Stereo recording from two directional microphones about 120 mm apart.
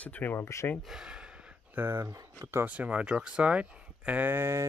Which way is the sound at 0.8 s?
5° right (ahead or behind).